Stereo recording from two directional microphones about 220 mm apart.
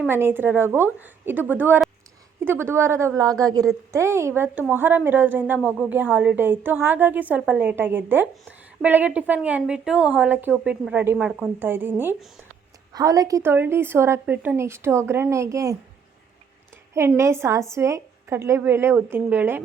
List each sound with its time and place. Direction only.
0.1 s a woman's voice: 10° right (ahead or behind)
16.9 s a woman's voice: 10° right (ahead or behind)